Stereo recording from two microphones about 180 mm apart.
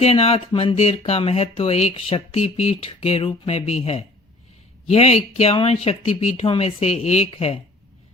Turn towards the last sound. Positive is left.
turn(degrees=35)  # may be behind; listen again after turning